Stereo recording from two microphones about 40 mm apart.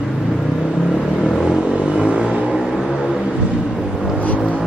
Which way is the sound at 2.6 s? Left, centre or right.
Centre.